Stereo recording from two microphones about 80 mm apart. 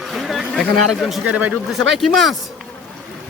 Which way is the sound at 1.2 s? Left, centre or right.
Centre.